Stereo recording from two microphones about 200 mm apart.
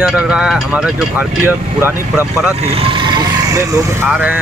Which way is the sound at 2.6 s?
30° right (ahead or behind).